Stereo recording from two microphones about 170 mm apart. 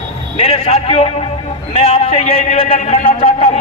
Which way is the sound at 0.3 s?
30° left (ahead or behind).